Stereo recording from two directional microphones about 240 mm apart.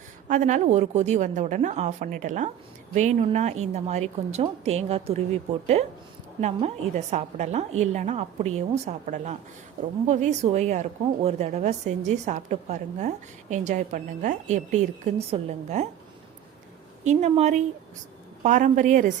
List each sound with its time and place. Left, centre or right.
0.3 s a woman's voice: right
17.0 s a woman's voice: right